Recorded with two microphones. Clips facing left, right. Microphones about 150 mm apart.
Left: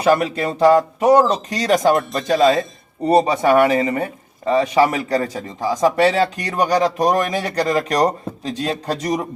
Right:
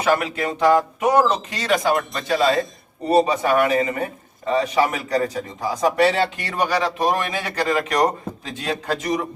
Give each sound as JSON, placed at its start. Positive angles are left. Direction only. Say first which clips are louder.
{"t": 0.0, "sound": "speech", "louder": "left 4 dB", "side_deg": 35}